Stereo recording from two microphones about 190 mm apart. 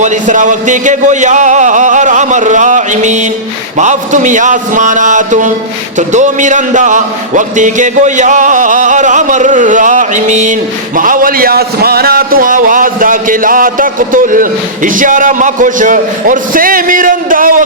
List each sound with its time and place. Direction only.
0.0 s a man's voice: 40° right (ahead or behind)